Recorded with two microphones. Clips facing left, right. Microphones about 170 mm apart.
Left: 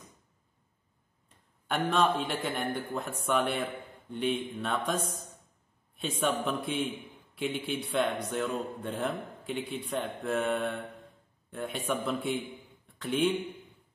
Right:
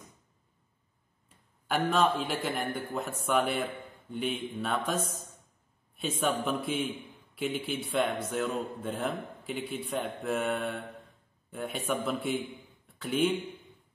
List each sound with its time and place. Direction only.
1.7 s speech: centre (ahead or behind)